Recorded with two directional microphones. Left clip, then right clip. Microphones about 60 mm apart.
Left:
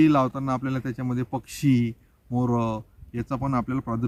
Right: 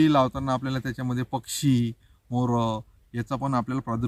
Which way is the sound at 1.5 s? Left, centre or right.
Right.